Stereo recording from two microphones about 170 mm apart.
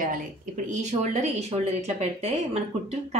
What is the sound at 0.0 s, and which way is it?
Speech, 50° right (ahead or behind).